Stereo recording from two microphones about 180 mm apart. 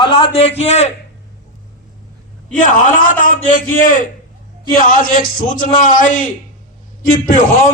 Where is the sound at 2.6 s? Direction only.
50° left (ahead or behind).